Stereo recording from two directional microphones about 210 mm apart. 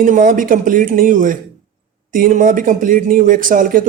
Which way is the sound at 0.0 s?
40° right (ahead or behind).